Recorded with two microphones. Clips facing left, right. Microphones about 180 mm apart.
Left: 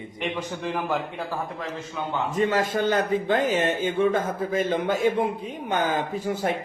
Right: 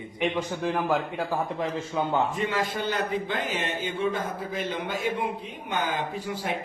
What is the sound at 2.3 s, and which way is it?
A man's voice, 45° left (ahead or behind).